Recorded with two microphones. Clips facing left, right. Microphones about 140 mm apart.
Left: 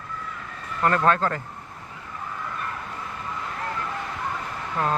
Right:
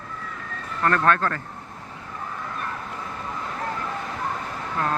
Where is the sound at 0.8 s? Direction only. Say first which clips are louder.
Even; 15° left (ahead or behind).